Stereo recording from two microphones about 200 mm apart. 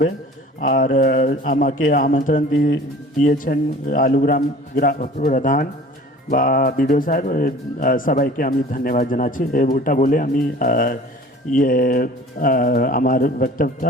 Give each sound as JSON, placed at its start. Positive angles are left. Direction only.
{"t": 0.6, "sound": "a man's voice", "side_deg": 40}
{"t": 2.5, "sound": "speech", "side_deg": 75}
{"t": 3.2, "sound": "speech", "side_deg": 40}